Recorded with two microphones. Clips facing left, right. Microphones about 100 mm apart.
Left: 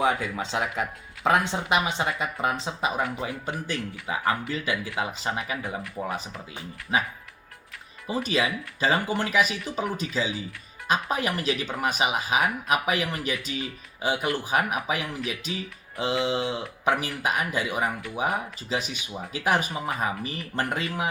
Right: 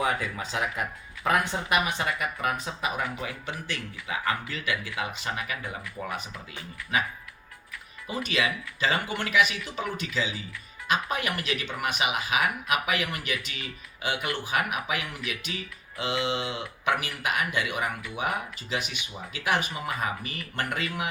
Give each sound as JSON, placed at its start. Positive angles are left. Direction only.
{"t": 0.0, "sound": "speech", "side_deg": 20}
{"t": 3.4, "sound": "speech", "side_deg": 35}
{"t": 8.0, "sound": "speech", "side_deg": 35}